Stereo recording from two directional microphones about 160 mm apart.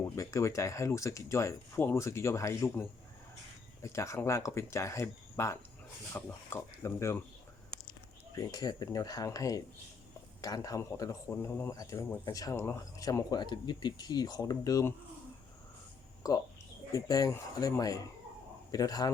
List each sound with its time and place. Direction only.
0.0 s speech: 20° left (ahead or behind)
3.8 s speech: 20° left (ahead or behind)
8.4 s speech: 25° left (ahead or behind)
16.2 s speech: 20° left (ahead or behind)